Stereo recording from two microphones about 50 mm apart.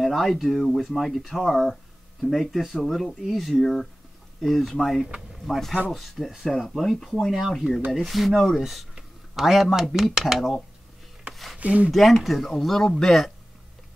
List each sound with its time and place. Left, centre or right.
0.0 s speech: centre
11.5 s speech: right
11.9 s speech: centre